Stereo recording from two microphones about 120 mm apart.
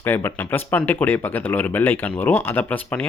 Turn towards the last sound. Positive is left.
turn(degrees=15)  # may be behind; listen again after turning